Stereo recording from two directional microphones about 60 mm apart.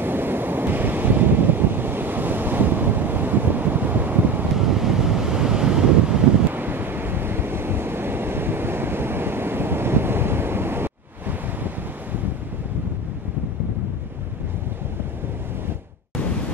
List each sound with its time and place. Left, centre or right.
0.0 s waves: right
4.6 s waves: centre
6.5 s waves: right